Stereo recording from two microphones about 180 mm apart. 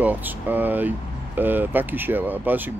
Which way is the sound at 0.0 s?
10° right (ahead or behind).